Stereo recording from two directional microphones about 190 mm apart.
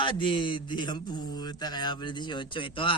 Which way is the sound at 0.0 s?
25° left (ahead or behind).